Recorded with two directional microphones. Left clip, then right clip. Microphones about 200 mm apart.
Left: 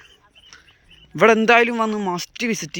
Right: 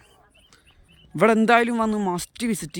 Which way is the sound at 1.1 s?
10° right (ahead or behind).